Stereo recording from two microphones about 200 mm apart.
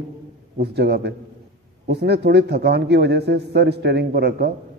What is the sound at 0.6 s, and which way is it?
A man's voice, 55° right (ahead or behind).